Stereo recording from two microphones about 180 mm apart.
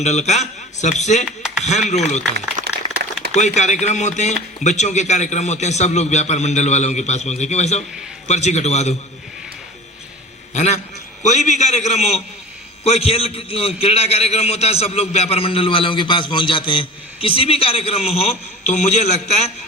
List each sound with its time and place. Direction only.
0.0 s a man's voice: 40° left (ahead or behind)
1.4 s a sound: 5° right (ahead or behind)
1.9 s a man's voice: 40° left (ahead or behind)
2.7 s a sound: 65° right (ahead or behind)
3.3 s a man's voice: 40° left (ahead or behind)
10.5 s a man's voice: 40° left (ahead or behind)